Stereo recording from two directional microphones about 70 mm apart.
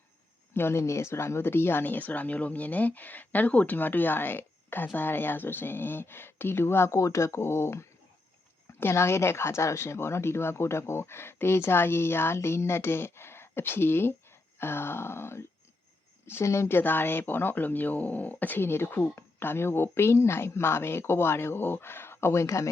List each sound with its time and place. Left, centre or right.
0.5 s speech: left